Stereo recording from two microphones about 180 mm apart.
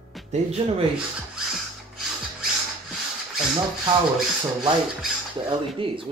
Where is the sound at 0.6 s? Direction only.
30° right (ahead or behind).